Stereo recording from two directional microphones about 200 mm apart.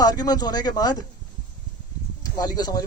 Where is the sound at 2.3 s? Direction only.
20° left (ahead or behind).